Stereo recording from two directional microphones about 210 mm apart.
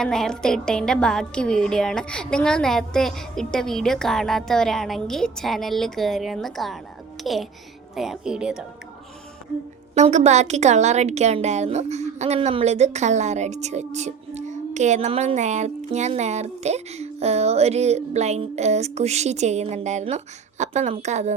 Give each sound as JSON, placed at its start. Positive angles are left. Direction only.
{"t": 0.0, "sound": "speech", "side_deg": 5}
{"t": 9.9, "sound": "a woman's voice", "side_deg": -35}